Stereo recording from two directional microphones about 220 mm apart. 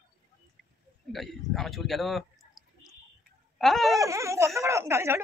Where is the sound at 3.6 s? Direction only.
Centre (ahead or behind).